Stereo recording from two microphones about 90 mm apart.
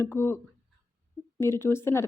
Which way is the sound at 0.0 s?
30° left (ahead or behind).